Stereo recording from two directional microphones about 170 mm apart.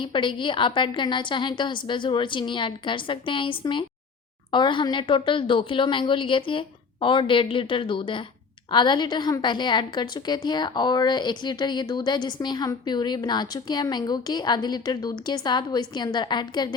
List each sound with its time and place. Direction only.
0.0 s a woman's voice: 30° left (ahead or behind)